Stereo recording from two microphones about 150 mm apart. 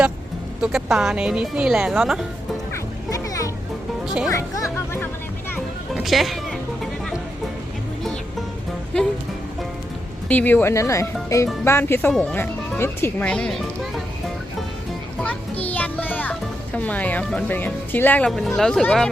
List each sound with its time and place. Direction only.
0.6 s a woman's voice: 5° right (ahead or behind)
2.7 s music: 20° left (ahead or behind)
4.0 s music: 5° right (ahead or behind)
4.3 s a woman's voice: 20° left (ahead or behind)
5.9 s speech: centre (ahead or behind)
10.2 s speech: 10° left (ahead or behind)
15.2 s children playing: 5° left (ahead or behind)
15.7 s music: 10° left (ahead or behind)
16.7 s speech: 10° left (ahead or behind)
18.3 s a woman's voice: centre (ahead or behind)